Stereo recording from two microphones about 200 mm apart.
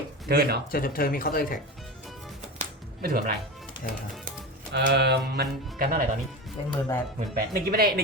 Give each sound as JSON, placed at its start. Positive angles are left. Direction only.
{"t": 0.3, "sound": "speech", "side_deg": -50}
{"t": 0.7, "sound": "speech", "side_deg": 45}
{"t": 2.6, "sound": "a sound", "side_deg": -45}
{"t": 4.3, "sound": "speech", "side_deg": -50}
{"t": 6.7, "sound": "speech", "side_deg": 20}
{"t": 7.3, "sound": "speech", "side_deg": -45}